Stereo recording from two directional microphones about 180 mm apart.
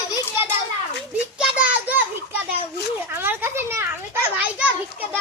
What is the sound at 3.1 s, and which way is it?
A child's voice, 10° right (ahead or behind).